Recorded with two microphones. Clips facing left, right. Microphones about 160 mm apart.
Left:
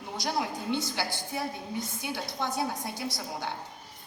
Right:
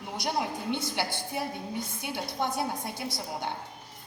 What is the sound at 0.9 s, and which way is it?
A woman's voice, 20° right (ahead or behind).